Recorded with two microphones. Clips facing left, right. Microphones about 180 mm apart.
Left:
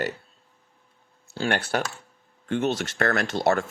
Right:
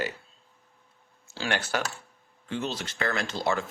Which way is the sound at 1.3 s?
55° left (ahead or behind).